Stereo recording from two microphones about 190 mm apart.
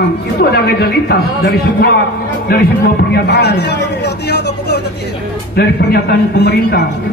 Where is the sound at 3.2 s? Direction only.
60° left (ahead or behind).